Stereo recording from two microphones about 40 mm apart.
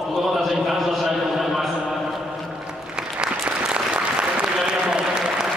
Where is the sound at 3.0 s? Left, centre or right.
Centre.